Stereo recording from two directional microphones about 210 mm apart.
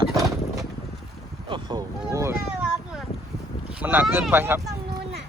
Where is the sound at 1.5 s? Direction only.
20° right (ahead or behind).